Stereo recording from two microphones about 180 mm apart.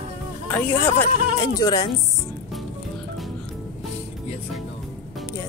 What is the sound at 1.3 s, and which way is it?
Speech, 20° left (ahead or behind).